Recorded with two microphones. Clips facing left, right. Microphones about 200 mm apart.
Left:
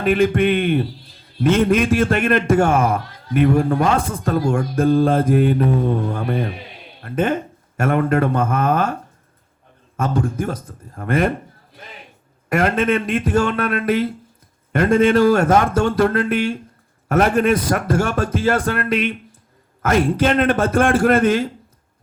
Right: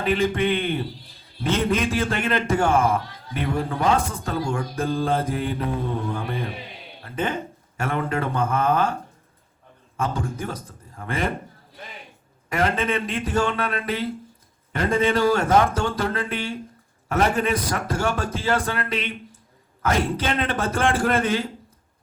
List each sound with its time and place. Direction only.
0.0 s a man's voice: 50° left (ahead or behind)
10.0 s a man's voice: 50° left (ahead or behind)
12.5 s a man's voice: 50° left (ahead or behind)